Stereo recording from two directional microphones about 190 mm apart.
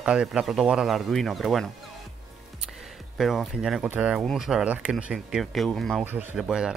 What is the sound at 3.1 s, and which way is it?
Speech, centre (ahead or behind).